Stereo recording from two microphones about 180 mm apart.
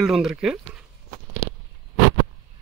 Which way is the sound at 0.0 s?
Centre (ahead or behind).